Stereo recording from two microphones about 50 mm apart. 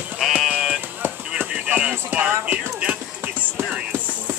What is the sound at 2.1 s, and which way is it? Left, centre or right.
Speech, right.